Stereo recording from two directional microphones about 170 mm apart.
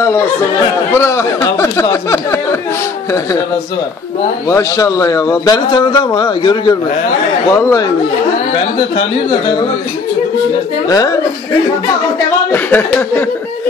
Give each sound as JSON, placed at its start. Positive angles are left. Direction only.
{"t": 0.0, "sound": "speech", "side_deg": 15}
{"t": 4.5, "sound": "a man's voice", "side_deg": 20}
{"t": 10.9, "sound": "a man's voice", "side_deg": 20}
{"t": 12.4, "sound": "speech", "side_deg": 10}